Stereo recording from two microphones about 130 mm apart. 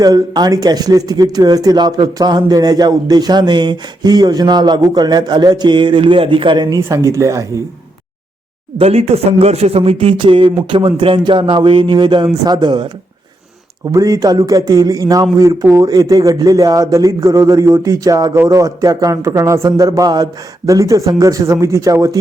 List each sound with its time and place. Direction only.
0.0 s speech: 30° right (ahead or behind)
8.8 s speech: 50° right (ahead or behind); by 12.9 s 35° right (ahead or behind)
13.9 s a man's voice: 25° right (ahead or behind)